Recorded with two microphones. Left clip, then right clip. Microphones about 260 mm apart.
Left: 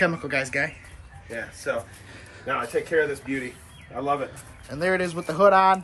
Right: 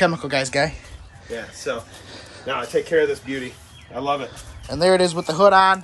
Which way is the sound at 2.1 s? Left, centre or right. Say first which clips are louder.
Right 5 dB; centre.